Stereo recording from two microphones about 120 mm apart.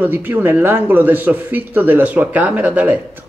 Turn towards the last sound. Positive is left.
turn(degrees=-15)  # may be behind; listen again after turning